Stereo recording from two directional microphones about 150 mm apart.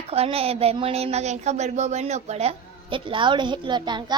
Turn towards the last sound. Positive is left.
turn(degrees=-30)  # may be behind; listen again after turning